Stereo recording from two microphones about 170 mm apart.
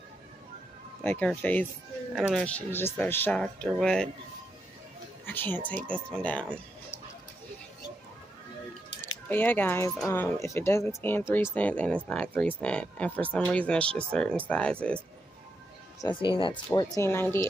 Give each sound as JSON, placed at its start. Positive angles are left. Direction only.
{"t": 1.0, "sound": "speech", "side_deg": 10}
{"t": 2.1, "sound": "speech", "side_deg": -5}
{"t": 2.4, "sound": "speech", "side_deg": 10}
{"t": 5.2, "sound": "speech", "side_deg": 10}
{"t": 9.0, "sound": "speech", "side_deg": 10}
{"t": 16.2, "sound": "speech", "side_deg": 30}